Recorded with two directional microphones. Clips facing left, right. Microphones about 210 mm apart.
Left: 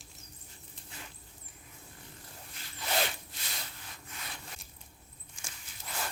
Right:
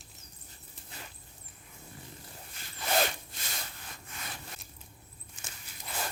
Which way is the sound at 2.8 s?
45° right (ahead or behind).